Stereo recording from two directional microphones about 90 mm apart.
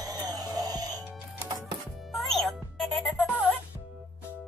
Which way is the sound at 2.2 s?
5° left (ahead or behind).